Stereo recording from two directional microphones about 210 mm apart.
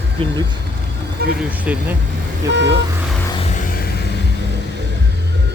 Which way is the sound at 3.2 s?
25° left (ahead or behind).